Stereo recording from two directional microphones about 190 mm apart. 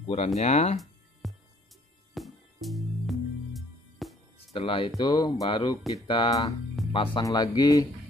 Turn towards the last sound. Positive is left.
turn(degrees=20)  # may be behind; listen again after turning